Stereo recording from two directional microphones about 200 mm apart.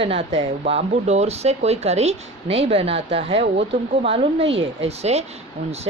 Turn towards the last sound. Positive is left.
turn(degrees=-30)  # may be behind; listen again after turning